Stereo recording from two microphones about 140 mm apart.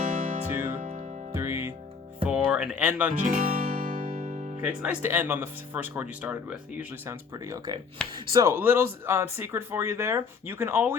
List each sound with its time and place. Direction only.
0.0 s music: 60° right (ahead or behind)
0.5 s music: 20° right (ahead or behind)
0.8 s music: 65° right (ahead or behind)
1.3 s music: 15° right (ahead or behind)
2.2 s music: 5° right (ahead or behind)
3.2 s music: 70° right (ahead or behind)
4.6 s speech: 10° right (ahead or behind); by 8.4 s 30° right (ahead or behind)
8.4 s speech: 15° right (ahead or behind)